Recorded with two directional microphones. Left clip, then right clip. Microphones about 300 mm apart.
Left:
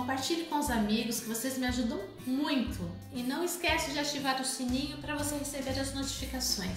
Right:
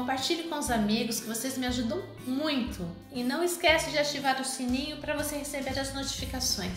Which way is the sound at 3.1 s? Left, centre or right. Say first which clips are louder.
Right 5 dB; right.